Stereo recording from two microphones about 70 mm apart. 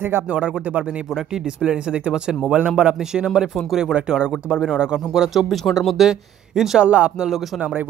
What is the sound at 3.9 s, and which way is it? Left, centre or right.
Speech, centre.